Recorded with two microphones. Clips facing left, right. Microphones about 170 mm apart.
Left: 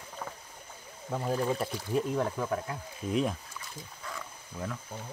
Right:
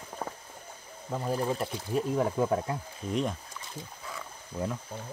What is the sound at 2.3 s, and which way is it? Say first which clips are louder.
Speech: right 5 dB; 25° right (ahead or behind).